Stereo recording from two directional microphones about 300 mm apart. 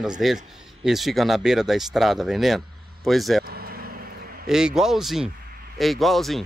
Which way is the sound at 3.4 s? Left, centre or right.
Right.